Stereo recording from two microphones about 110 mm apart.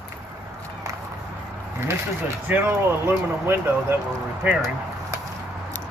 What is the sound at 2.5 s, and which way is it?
Speech, 20° right (ahead or behind).